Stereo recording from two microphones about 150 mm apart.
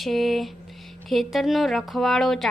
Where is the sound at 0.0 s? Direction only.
Centre (ahead or behind).